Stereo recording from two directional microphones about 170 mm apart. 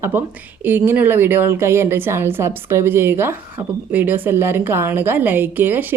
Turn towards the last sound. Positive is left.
turn(degrees=-10)  # may be behind; listen again after turning